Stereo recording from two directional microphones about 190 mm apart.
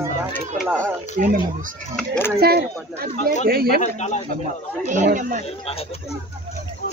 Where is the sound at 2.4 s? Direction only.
55° right (ahead or behind).